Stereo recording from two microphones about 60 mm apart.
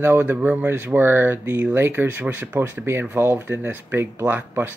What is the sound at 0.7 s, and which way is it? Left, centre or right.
Speech, right.